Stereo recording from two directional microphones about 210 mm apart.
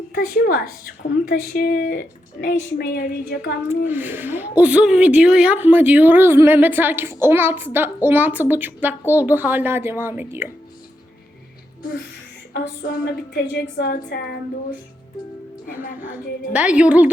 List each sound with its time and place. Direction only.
0.1 s a woman's voice: 45° left (ahead or behind)
3.7 s a woman's voice: 10° right (ahead or behind)
12.5 s a woman's voice: 50° left (ahead or behind)
15.8 s speech: 40° left (ahead or behind)
16.1 s a woman's voice: 5° right (ahead or behind)